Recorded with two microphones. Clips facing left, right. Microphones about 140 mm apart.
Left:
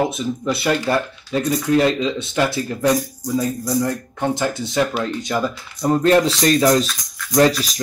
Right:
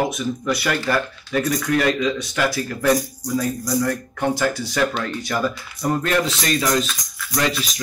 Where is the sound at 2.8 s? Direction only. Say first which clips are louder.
Even; 15° left (ahead or behind).